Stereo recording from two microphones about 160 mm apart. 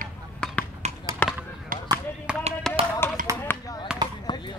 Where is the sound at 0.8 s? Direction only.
45° right (ahead or behind).